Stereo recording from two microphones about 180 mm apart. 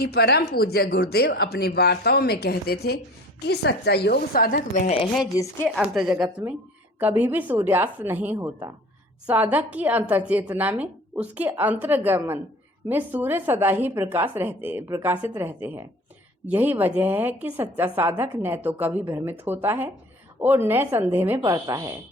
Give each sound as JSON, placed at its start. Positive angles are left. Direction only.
{"t": 0.0, "sound": "speech", "side_deg": 65}
{"t": 5.6, "sound": "a woman's voice", "side_deg": 0}